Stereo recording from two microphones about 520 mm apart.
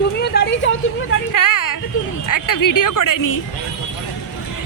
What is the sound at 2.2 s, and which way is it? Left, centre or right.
Speech, left.